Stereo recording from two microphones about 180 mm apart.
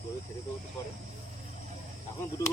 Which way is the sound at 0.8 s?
15° left (ahead or behind).